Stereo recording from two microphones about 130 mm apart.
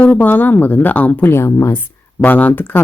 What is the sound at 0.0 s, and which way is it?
A woman's voice, 10° left (ahead or behind).